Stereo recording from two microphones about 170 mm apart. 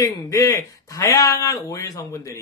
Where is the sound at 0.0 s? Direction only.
20° left (ahead or behind).